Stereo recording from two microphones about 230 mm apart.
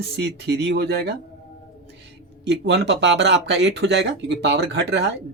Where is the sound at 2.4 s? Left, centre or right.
Right.